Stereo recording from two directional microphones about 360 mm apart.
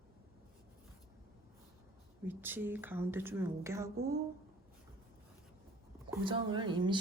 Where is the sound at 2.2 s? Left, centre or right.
Centre.